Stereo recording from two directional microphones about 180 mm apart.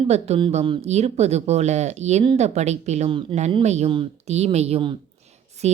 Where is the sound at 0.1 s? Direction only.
30° right (ahead or behind).